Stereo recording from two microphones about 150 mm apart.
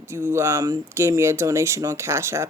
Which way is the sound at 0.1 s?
15° right (ahead or behind).